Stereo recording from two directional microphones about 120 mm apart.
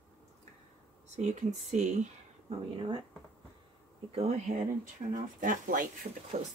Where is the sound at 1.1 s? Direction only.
70° right (ahead or behind).